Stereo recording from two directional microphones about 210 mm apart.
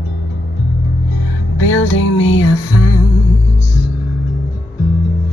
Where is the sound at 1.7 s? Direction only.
70° left (ahead or behind).